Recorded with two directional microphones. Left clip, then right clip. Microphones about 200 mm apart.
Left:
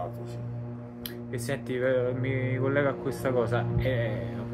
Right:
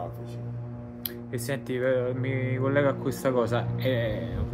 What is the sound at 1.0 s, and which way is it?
Speech, 20° right (ahead or behind).